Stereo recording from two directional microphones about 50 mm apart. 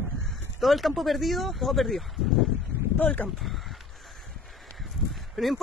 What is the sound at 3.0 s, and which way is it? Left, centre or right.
Speech, left.